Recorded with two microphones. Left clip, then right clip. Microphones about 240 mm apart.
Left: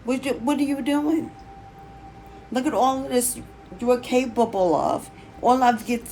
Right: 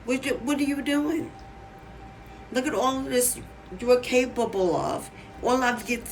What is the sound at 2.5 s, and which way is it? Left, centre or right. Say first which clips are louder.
A woman's voice: left 4 dB; centre.